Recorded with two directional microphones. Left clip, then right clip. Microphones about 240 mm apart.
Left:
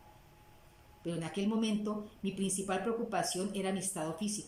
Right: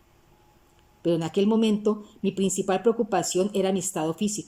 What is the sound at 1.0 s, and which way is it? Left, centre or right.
Speech, right.